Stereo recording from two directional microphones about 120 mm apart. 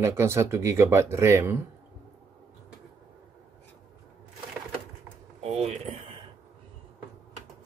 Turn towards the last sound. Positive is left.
turn(degrees=-60)  # may be behind; listen again after turning